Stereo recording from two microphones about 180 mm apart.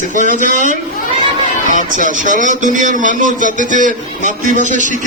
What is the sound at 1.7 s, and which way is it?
A man's voice, 45° right (ahead or behind).